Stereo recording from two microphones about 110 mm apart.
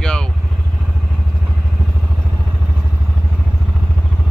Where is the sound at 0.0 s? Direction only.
5° left (ahead or behind).